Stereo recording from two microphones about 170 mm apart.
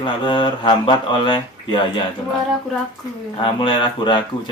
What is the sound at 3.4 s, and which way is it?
Speech, 30° left (ahead or behind).